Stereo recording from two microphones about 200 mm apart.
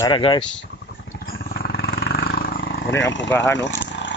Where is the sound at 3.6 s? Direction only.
60° left (ahead or behind).